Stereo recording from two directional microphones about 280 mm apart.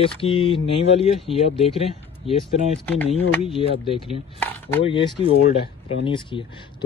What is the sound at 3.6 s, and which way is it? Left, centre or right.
Speech, centre.